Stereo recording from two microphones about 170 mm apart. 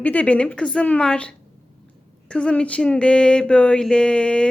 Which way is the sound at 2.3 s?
5° left (ahead or behind).